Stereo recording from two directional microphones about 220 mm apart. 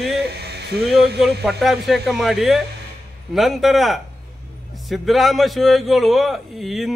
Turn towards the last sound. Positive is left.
turn(degrees=0)  # may be behind; listen again after turning